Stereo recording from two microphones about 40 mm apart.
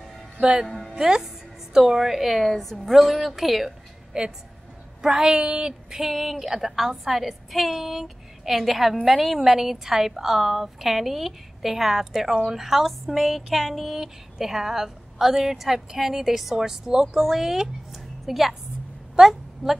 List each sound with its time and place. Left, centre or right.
0.4 s a woman's voice: centre
0.7 s speech: centre
0.9 s speech: centre
4.1 s a woman's voice: right